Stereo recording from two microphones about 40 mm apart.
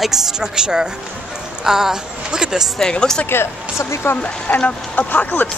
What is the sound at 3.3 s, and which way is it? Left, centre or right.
Speech, left.